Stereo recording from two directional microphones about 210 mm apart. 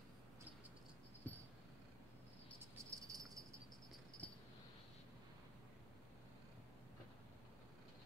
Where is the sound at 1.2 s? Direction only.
10° left (ahead or behind).